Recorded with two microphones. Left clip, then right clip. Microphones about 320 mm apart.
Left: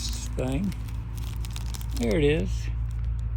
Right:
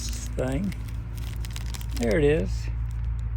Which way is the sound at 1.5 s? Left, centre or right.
Centre.